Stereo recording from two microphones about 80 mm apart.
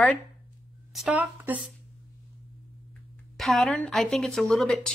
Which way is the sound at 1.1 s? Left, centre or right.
Right.